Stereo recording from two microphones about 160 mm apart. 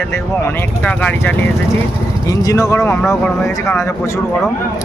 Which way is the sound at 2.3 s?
20° left (ahead or behind).